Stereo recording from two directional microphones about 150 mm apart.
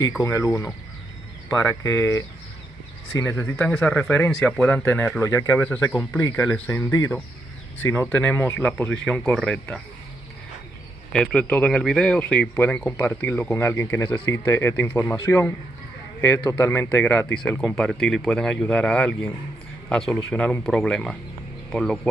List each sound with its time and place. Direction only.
0.2 s speech: 20° left (ahead or behind)
8.1 s speech: 10° left (ahead or behind)
11.1 s speech: 10° left (ahead or behind)